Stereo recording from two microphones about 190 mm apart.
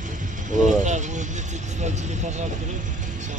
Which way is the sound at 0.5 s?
40° right (ahead or behind).